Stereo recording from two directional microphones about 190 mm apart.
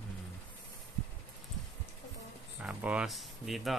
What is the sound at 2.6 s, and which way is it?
Speech, 5° right (ahead or behind).